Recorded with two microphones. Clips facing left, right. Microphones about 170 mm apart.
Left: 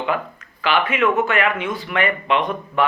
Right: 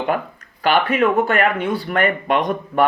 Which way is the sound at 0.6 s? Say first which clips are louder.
Right 3 dB; 40° right (ahead or behind).